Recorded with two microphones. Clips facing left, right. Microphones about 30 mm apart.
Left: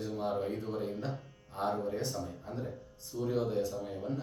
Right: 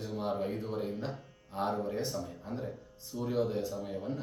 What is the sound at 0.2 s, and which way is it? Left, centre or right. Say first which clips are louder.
Speech: right 1 dB; centre.